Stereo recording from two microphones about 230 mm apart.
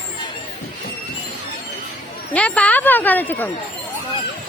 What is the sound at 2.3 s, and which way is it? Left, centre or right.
Speech, centre.